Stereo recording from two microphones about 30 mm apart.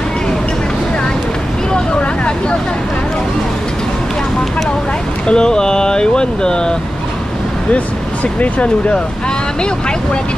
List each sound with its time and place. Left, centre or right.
5.2 s speech: left
7.7 s speech: left